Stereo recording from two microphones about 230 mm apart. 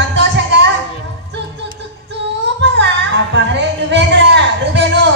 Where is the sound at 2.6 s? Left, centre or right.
Right.